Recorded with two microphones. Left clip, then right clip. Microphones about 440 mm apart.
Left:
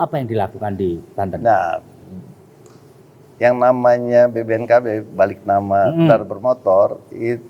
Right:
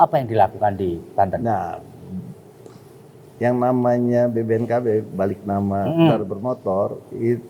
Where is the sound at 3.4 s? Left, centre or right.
Left.